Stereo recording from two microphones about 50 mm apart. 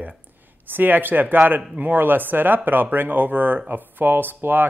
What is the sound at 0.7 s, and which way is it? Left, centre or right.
Speech, right.